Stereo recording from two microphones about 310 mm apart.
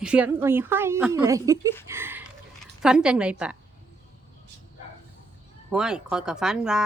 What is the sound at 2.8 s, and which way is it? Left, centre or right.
Speech, centre.